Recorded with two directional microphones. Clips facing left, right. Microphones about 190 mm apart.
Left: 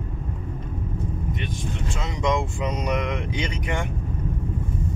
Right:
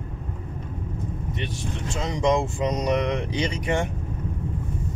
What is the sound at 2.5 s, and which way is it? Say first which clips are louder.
Speech: right 3 dB; 40° right (ahead or behind).